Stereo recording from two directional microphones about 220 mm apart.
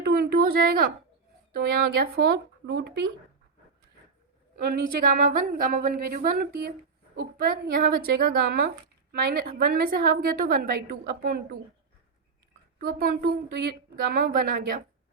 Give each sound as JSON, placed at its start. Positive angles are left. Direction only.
{"t": 0.0, "sound": "a sound", "side_deg": -45}
{"t": 1.5, "sound": "a woman's voice", "side_deg": -45}
{"t": 4.5, "sound": "a woman's voice", "side_deg": -40}
{"t": 12.9, "sound": "a woman's voice", "side_deg": -45}